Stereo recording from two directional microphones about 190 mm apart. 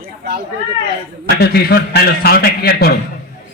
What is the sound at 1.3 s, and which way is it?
A man's voice, 55° left (ahead or behind).